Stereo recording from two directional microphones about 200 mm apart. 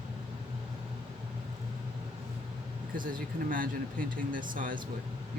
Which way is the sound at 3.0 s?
45° right (ahead or behind).